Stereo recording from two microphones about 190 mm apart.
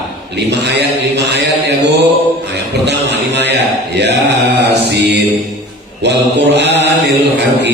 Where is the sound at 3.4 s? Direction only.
65° right (ahead or behind).